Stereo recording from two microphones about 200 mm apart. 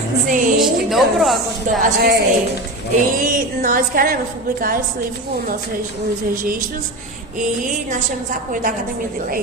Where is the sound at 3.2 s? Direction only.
40° right (ahead or behind).